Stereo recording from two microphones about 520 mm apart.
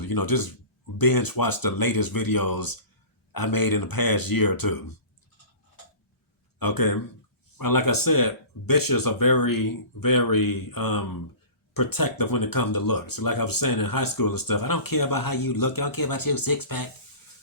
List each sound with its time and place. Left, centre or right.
0.0 s speech: left
6.6 s speech: left